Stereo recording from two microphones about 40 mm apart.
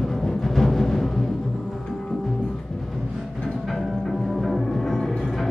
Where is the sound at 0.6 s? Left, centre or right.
Centre.